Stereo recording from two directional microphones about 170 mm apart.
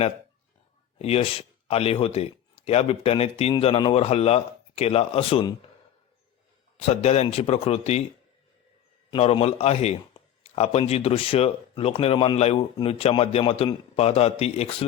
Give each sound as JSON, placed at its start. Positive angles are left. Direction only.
{"t": 0.9, "sound": "a man's voice", "side_deg": 35}
{"t": 6.7, "sound": "a man's voice", "side_deg": 35}
{"t": 9.0, "sound": "a man's voice", "side_deg": 35}